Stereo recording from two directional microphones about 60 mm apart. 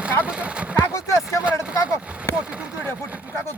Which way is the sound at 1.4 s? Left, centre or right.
Centre.